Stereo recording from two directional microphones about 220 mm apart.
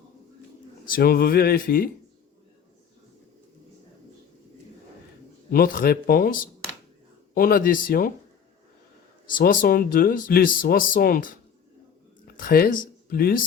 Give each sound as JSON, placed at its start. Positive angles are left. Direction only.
{"t": 0.9, "sound": "a sound", "side_deg": 40}
{"t": 5.5, "sound": "speech", "side_deg": 40}
{"t": 9.2, "sound": "speech", "side_deg": 40}
{"t": 12.4, "sound": "speech", "side_deg": 40}